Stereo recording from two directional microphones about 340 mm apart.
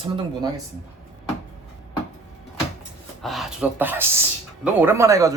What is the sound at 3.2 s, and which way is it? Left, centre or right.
Speech, centre.